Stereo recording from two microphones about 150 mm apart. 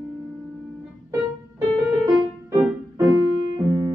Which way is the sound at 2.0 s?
20° right (ahead or behind).